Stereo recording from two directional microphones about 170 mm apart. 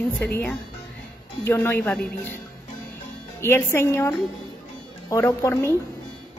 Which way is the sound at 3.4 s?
15° left (ahead or behind).